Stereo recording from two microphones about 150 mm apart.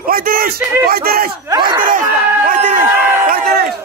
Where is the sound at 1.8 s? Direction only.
65° right (ahead or behind).